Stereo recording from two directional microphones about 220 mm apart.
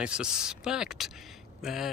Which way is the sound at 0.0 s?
5° right (ahead or behind).